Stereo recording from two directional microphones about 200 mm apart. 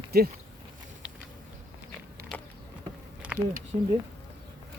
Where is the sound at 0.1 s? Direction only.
50° right (ahead or behind).